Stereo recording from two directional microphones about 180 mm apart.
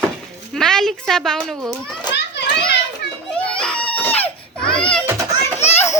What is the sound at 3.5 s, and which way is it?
Baby cry, 5° left (ahead or behind).